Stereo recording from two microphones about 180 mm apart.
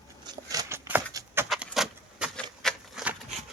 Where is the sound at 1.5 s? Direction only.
Centre (ahead or behind).